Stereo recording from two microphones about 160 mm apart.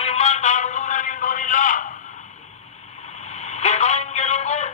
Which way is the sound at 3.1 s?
45° left (ahead or behind).